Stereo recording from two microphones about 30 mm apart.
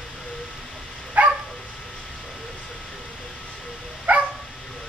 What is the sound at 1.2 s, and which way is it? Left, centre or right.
Dog, right.